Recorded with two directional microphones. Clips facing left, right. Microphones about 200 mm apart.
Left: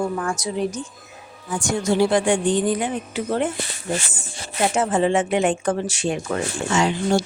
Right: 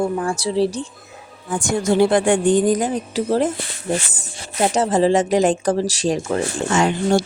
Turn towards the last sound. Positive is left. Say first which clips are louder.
# right 3 dB
turn(degrees=-50)  # may be behind; listen again after turning